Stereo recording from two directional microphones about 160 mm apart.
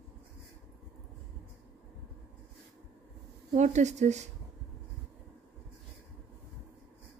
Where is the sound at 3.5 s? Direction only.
45° right (ahead or behind).